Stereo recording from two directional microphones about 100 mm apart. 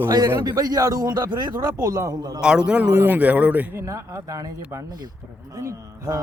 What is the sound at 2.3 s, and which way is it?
A man's voice, 10° right (ahead or behind).